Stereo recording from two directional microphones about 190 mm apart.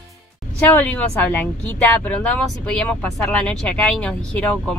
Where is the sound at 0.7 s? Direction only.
10° left (ahead or behind).